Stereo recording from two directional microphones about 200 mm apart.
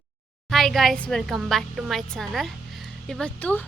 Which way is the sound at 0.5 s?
Centre (ahead or behind).